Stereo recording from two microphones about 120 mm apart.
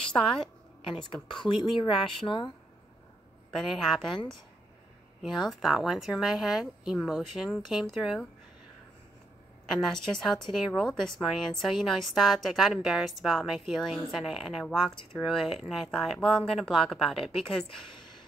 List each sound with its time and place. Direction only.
0.0 s a woman's voice: 5° left (ahead or behind)
1.3 s speech: 40° left (ahead or behind)
3.5 s a woman's voice: centre (ahead or behind)
5.5 s a woman's voice: 5° right (ahead or behind)
9.8 s a woman's voice: 5° left (ahead or behind)